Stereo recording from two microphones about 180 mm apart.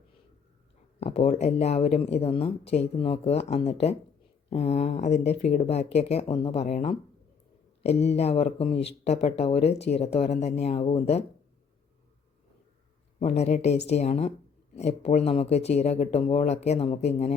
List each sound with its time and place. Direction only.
0.9 s speech: 35° left (ahead or behind)
13.1 s speech: 35° left (ahead or behind)